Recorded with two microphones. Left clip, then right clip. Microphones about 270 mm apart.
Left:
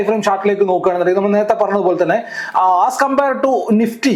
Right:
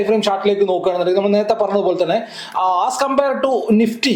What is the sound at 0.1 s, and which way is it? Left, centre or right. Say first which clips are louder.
A man's voice: left 1 dB; centre.